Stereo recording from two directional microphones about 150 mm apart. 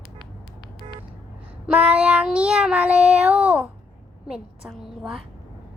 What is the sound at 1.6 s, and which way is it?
Child singing, 10° right (ahead or behind).